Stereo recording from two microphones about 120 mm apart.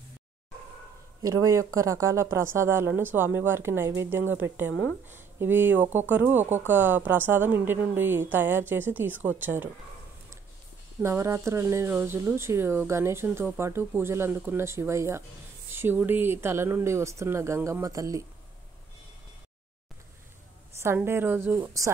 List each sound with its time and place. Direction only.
1.2 s a woman's voice: 25° right (ahead or behind)
11.0 s speech: 25° right (ahead or behind)
20.8 s speech: 20° right (ahead or behind)